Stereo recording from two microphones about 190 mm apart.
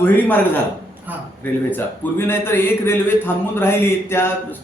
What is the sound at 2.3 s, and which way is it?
A man's voice, 10° left (ahead or behind).